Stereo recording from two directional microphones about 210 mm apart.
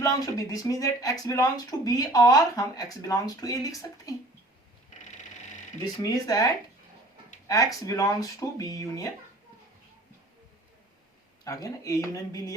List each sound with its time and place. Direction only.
0.0 s speech: 15° left (ahead or behind)
5.8 s speech: 15° left (ahead or behind)
11.4 s speech: 15° left (ahead or behind)